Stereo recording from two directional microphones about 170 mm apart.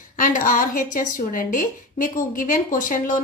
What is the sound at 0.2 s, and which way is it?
A woman's voice, 50° left (ahead or behind).